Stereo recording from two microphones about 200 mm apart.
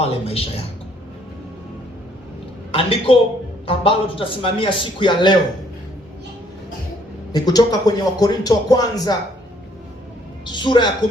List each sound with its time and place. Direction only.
0.0 s speech: 30° left (ahead or behind)
2.7 s speech: 25° left (ahead or behind)
7.3 s speech: 20° left (ahead or behind)
10.5 s speech: 25° left (ahead or behind)